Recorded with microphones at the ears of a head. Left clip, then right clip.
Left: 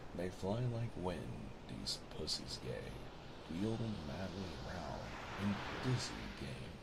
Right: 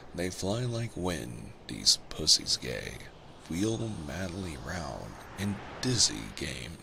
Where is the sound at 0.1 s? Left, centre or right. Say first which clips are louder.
Right 9 dB; right.